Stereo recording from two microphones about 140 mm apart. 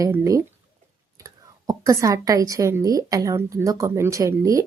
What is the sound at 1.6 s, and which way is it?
A woman's voice, 25° right (ahead or behind).